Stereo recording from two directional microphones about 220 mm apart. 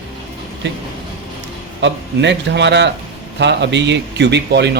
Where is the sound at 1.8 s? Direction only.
50° right (ahead or behind).